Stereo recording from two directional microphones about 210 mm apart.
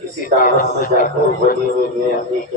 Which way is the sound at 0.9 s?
40° left (ahead or behind).